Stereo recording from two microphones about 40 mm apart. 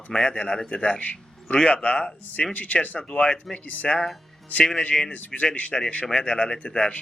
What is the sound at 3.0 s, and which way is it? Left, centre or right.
Speech, left.